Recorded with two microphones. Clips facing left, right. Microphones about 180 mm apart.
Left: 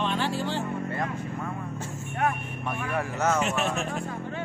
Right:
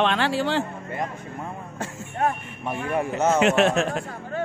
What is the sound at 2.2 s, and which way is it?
Speech, 25° right (ahead or behind).